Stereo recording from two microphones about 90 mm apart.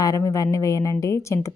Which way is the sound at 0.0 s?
40° left (ahead or behind).